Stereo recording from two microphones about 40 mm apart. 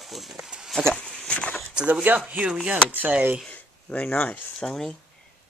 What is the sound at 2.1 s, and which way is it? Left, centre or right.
Speech, right.